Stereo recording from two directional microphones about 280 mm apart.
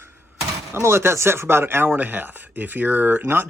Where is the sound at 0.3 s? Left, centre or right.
Centre.